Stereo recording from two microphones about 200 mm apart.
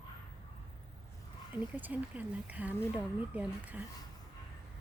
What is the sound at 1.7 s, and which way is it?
Speech, 10° right (ahead or behind).